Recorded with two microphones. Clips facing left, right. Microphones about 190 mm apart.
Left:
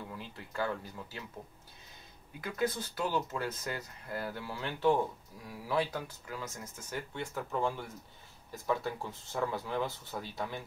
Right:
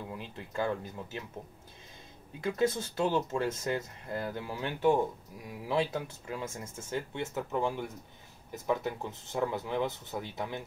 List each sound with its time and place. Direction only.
0.1 s speech: 20° right (ahead or behind)
2.4 s speech: 25° right (ahead or behind)